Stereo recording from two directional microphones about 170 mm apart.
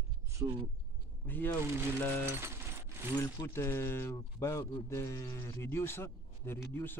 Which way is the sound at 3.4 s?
15° left (ahead or behind).